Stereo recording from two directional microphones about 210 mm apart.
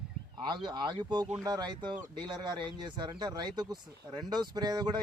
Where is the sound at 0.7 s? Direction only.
20° right (ahead or behind).